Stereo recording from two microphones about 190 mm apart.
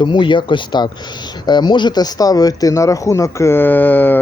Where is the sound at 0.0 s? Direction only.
25° left (ahead or behind).